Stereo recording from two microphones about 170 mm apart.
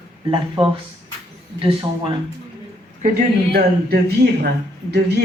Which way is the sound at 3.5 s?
70° right (ahead or behind).